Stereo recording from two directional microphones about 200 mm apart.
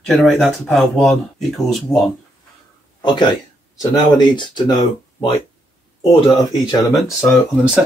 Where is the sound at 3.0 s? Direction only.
20° left (ahead or behind).